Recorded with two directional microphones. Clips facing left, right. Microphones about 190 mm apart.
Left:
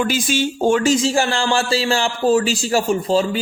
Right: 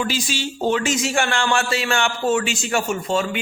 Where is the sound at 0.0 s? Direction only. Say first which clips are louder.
Left 5 dB; 50° left (ahead or behind).